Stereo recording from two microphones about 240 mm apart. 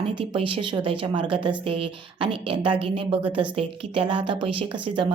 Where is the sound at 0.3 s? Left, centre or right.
Right.